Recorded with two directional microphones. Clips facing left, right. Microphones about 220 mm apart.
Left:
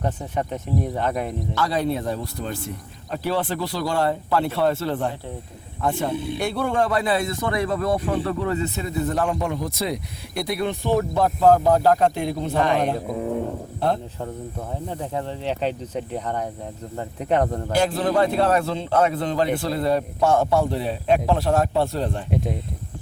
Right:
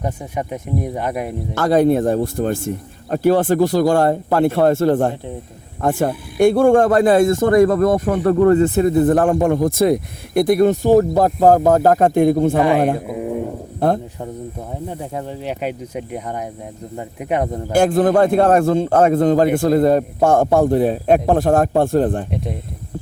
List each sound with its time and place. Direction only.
0.0 s speech: 10° right (ahead or behind)
1.5 s speech: 50° right (ahead or behind)
6.1 s speech: 25° left (ahead or behind)
6.4 s speech: 50° right (ahead or behind)
13.1 s speech: 10° right (ahead or behind)
13.7 s a man's voice: 50° right (ahead or behind)
14.8 s speech: 10° right (ahead or behind)
17.7 s speech: 50° right (ahead or behind)